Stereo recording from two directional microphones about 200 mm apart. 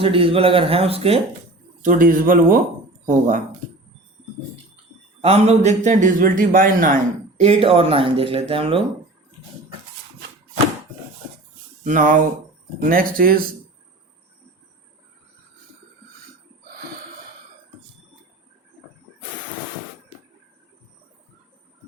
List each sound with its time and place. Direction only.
0.0 s speech: 25° right (ahead or behind)
1.8 s speech: 45° right (ahead or behind)
5.2 s a man's voice: 30° right (ahead or behind)
11.9 s a man's voice: 40° right (ahead or behind)